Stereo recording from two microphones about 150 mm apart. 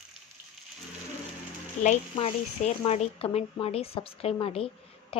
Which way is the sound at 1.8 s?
55° left (ahead or behind).